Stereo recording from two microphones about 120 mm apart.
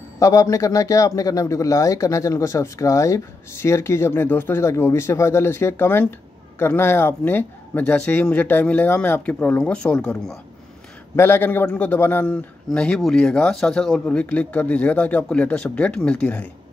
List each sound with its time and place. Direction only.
0.2 s a man's voice: 25° left (ahead or behind); by 10.4 s 5° left (ahead or behind)
11.1 s a man's voice: 20° left (ahead or behind)